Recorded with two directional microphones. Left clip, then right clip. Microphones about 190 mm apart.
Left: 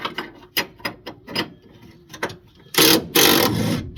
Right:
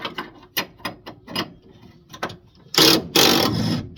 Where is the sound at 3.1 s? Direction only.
5° right (ahead or behind).